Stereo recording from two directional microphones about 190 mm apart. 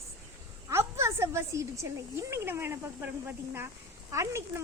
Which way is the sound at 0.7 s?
15° right (ahead or behind).